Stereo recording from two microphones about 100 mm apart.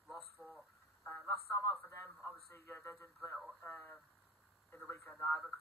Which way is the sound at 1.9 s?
25° left (ahead or behind).